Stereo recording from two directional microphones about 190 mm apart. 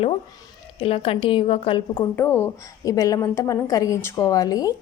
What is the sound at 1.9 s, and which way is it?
Speech, 10° left (ahead or behind).